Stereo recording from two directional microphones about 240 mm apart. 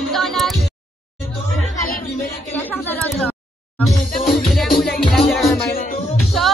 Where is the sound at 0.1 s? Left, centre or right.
Centre.